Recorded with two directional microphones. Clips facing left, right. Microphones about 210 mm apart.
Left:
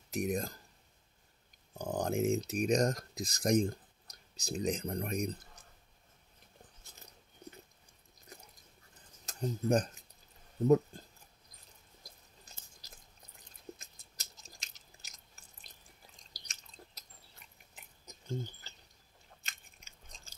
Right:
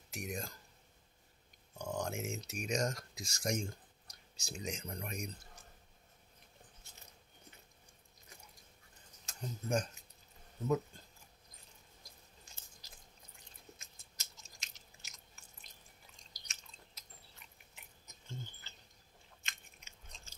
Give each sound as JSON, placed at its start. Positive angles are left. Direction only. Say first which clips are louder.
{"t": 0.1, "sound": "speech", "louder": "left 9 dB", "side_deg": 40}
{"t": 1.7, "sound": "speech", "louder": "left 5 dB", "side_deg": 35}
{"t": 9.2, "sound": "speech", "louder": "left 10 dB", "side_deg": 35}
{"t": 13.7, "sound": "chewing", "louder": "left 2 dB", "side_deg": 35}
{"t": 18.0, "sound": "a sound", "louder": "left 10 dB", "side_deg": 35}